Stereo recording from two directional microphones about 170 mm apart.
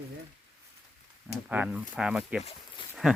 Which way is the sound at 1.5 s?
10° right (ahead or behind).